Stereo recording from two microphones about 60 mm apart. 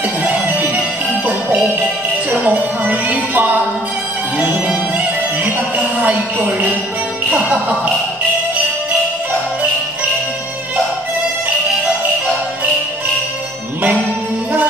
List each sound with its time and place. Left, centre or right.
0.2 s music: right
5.9 s music: right